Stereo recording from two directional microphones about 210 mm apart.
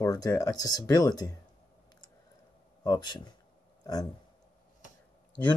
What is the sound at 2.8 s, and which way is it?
Speech, 20° left (ahead or behind).